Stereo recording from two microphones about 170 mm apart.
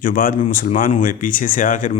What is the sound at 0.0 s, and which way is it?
A man's voice, 55° left (ahead or behind).